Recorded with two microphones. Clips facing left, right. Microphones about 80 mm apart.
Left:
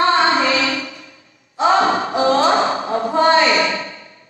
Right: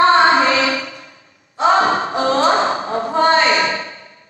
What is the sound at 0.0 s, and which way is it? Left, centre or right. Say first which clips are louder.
Child singing: right 3 dB; right.